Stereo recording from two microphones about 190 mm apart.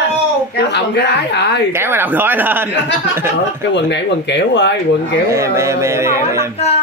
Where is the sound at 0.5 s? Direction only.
65° left (ahead or behind).